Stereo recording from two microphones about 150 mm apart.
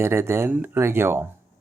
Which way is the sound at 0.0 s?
15° right (ahead or behind).